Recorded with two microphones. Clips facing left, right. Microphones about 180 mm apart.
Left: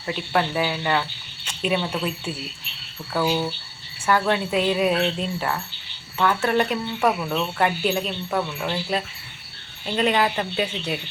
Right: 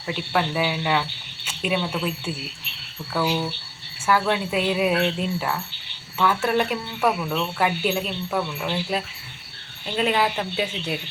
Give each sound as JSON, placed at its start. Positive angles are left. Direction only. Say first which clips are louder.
{"t": 0.0, "sound": "speech", "louder": "left 1 dB", "side_deg": -5}
{"t": 1.5, "sound": "a sound", "louder": "left 1 dB", "side_deg": -5}
{"t": 3.1, "sound": "speech", "louder": "left 1 dB", "side_deg": 10}
{"t": 4.0, "sound": "speech", "louder": "left 1 dB", "side_deg": -5}